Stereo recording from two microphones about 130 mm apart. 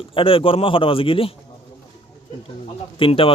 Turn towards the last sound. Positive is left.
turn(degrees=45)  # may be behind; listen again after turning